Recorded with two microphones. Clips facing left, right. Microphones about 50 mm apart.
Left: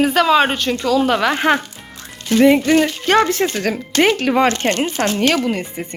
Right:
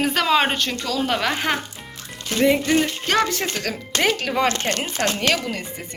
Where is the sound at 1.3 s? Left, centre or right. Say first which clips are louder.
Left 7 dB; left.